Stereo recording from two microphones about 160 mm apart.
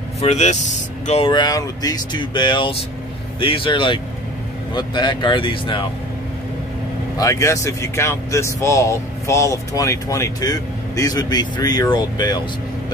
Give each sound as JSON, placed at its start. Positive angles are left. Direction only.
{"t": 0.2, "sound": "speech", "side_deg": 45}
{"t": 1.2, "sound": "speech", "side_deg": 30}
{"t": 7.2, "sound": "speech", "side_deg": 20}